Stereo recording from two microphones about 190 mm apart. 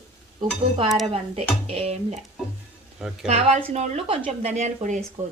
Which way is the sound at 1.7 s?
35° right (ahead or behind).